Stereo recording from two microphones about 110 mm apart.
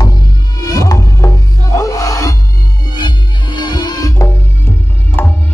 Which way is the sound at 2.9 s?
45° left (ahead or behind).